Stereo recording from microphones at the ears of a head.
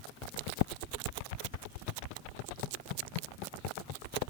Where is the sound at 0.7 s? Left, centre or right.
Right.